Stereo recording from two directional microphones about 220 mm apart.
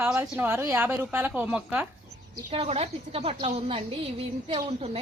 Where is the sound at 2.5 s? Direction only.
30° right (ahead or behind).